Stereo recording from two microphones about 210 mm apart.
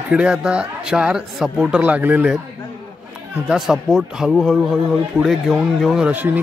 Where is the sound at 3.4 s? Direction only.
5° right (ahead or behind).